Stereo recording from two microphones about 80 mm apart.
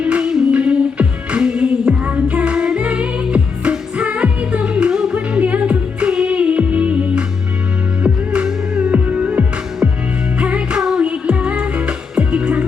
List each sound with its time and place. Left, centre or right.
0.0 s music: centre